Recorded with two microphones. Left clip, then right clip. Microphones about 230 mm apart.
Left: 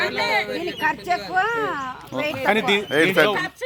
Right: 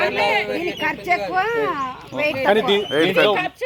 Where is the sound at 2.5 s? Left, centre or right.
Left.